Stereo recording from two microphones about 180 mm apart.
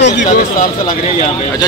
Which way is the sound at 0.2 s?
45° left (ahead or behind).